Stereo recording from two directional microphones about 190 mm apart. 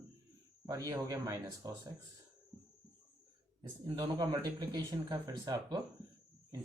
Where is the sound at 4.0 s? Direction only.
20° right (ahead or behind).